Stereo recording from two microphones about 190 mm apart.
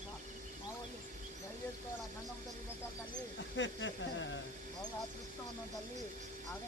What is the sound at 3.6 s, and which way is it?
Speech, 75° left (ahead or behind).